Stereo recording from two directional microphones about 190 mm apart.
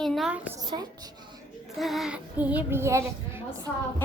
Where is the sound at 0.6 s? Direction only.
20° right (ahead or behind).